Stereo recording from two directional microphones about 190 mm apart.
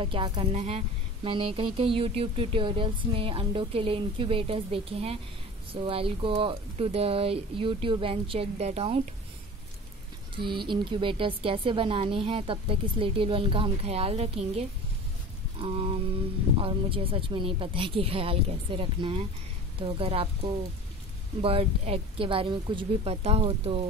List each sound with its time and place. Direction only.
0.0 s speech: 30° right (ahead or behind)
10.3 s speech: 25° right (ahead or behind)
15.5 s speech: 30° right (ahead or behind)